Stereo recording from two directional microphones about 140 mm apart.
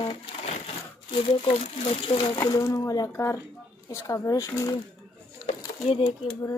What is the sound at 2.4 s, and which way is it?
Speech, 25° left (ahead or behind).